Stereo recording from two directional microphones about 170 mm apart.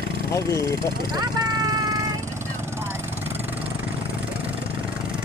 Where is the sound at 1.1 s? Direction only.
25° right (ahead or behind).